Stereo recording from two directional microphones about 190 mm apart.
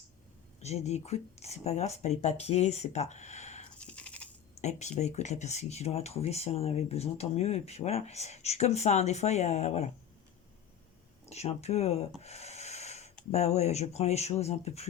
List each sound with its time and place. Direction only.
0.6 s speech: 35° left (ahead or behind)
3.8 s a sound: 5° left (ahead or behind)
4.5 s speech: 35° left (ahead or behind)
11.3 s speech: 35° left (ahead or behind)
12.2 s rub: 35° left (ahead or behind)
13.3 s speech: 35° left (ahead or behind)